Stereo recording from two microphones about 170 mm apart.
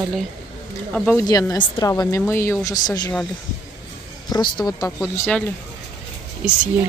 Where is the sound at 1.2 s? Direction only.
20° left (ahead or behind).